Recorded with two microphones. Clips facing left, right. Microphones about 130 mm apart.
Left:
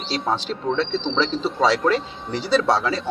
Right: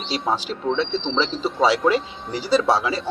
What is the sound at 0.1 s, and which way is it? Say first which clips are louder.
A man's voice: even; 10° right (ahead or behind).